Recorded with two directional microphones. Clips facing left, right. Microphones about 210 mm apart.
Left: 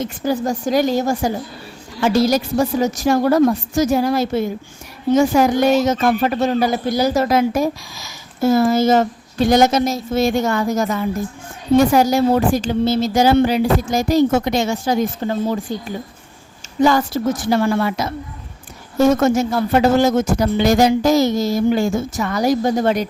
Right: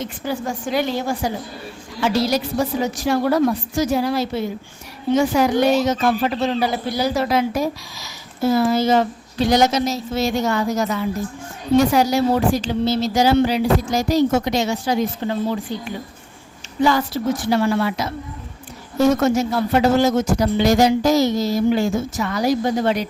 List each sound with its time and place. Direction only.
0.0 s a woman's voice: 40° left (ahead or behind)
16.8 s speech: 45° left (ahead or behind)